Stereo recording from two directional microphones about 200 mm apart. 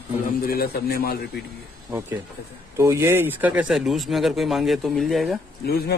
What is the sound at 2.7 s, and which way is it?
Speech, 15° right (ahead or behind).